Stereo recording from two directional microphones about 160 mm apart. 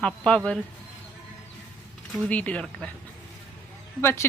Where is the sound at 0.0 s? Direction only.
5° left (ahead or behind).